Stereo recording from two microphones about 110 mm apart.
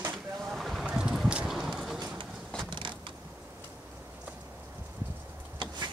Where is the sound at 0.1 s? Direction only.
Centre (ahead or behind).